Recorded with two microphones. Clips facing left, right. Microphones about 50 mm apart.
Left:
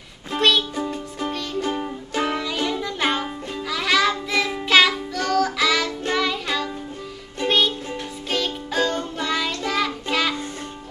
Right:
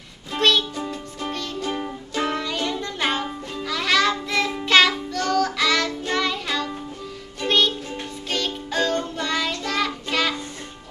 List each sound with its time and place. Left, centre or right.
0.4 s music: centre